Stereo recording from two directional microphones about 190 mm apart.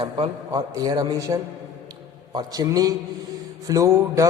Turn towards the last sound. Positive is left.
turn(degrees=-15)  # may be behind; listen again after turning